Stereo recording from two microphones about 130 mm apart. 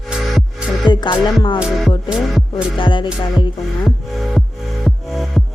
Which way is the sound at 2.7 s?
40° left (ahead or behind).